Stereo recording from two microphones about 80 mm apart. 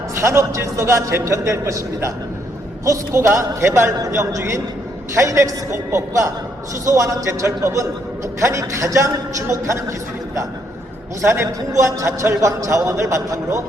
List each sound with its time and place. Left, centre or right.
0.1 s a man's voice: right
11.2 s a man's voice: right